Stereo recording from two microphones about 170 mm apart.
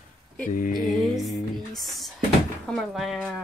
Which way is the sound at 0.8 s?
Centre (ahead or behind).